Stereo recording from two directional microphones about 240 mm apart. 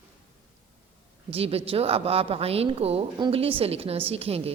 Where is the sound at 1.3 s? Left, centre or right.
Right.